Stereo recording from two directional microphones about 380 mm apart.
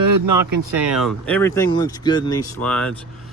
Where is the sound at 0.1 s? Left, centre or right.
Right.